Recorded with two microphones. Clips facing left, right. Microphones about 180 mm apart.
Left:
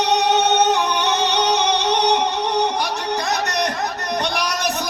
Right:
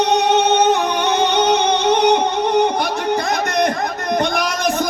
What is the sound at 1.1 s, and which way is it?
Music, 50° right (ahead or behind).